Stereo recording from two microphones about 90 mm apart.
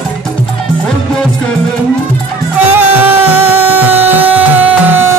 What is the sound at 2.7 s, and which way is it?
Music, 20° right (ahead or behind).